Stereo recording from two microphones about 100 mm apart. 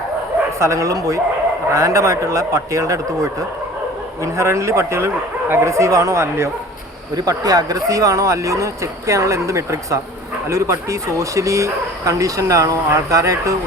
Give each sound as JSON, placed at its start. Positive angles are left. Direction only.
{"t": 0.6, "sound": "speech", "side_deg": -30}
{"t": 7.2, "sound": "speech", "side_deg": -40}